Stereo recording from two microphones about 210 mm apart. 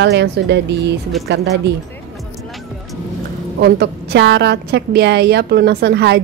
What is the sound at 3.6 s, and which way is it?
A woman's voice, 50° right (ahead or behind).